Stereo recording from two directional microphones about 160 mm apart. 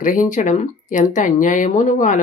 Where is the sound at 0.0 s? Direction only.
55° left (ahead or behind).